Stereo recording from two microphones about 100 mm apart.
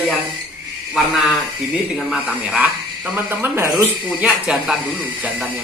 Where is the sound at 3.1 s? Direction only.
25° right (ahead or behind).